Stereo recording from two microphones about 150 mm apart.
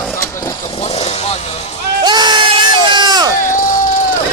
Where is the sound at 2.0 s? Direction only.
30° right (ahead or behind).